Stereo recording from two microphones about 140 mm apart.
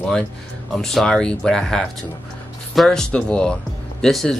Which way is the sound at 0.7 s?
5° left (ahead or behind).